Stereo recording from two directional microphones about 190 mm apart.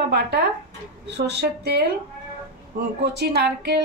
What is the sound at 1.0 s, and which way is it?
Speech, 60° right (ahead or behind).